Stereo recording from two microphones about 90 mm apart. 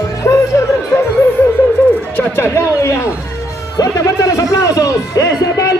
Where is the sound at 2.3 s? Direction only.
30° left (ahead or behind).